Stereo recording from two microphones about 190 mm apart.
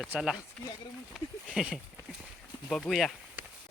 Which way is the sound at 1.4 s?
5° right (ahead or behind).